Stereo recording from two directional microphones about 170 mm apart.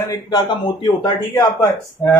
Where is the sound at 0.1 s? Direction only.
25° left (ahead or behind).